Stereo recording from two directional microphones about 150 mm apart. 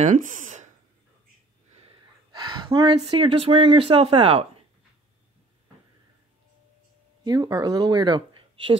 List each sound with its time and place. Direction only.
0.0 s speech: 60° right (ahead or behind)
2.3 s speech: 30° right (ahead or behind)
7.2 s speech: 25° right (ahead or behind)